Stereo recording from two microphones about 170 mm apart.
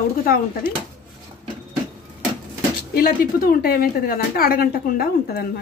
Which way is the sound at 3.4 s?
60° left (ahead or behind).